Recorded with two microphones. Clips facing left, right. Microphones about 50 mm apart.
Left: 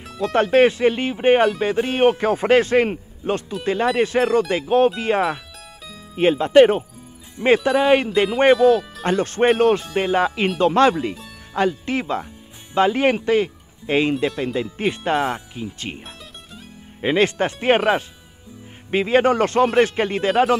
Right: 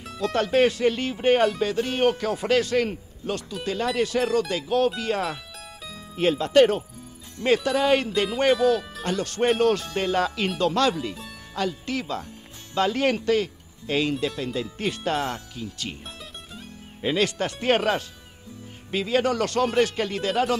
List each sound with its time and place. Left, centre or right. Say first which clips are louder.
0.2 s a man's voice: left 5 dB; centre
17.0 s a man's voice: left 6 dB; left